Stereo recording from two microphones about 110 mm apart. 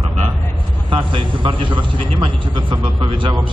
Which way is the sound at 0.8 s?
50° right (ahead or behind).